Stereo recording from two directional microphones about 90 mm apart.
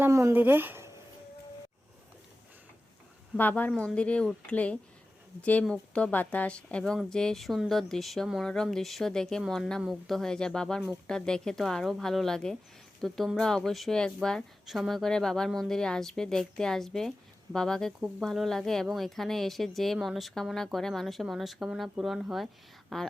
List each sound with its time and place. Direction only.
0.0 s speech: 30° right (ahead or behind)
0.3 s speech: 20° right (ahead or behind)
3.3 s a woman's voice: 20° left (ahead or behind); by 23.1 s 5° left (ahead or behind)